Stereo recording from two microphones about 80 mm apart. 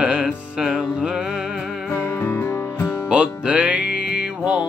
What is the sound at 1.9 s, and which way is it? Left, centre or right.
Music, left.